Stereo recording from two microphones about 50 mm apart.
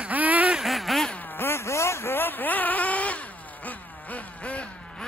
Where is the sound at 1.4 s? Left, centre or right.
Left.